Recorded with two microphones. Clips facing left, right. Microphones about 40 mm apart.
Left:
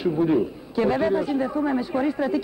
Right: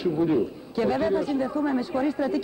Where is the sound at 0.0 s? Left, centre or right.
Centre.